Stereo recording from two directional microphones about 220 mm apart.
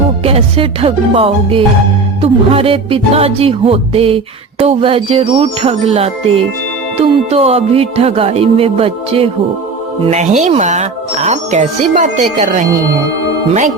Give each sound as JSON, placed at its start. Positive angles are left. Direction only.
{"t": 0.3, "sound": "music", "side_deg": -25}
{"t": 10.1, "sound": "speech", "side_deg": -30}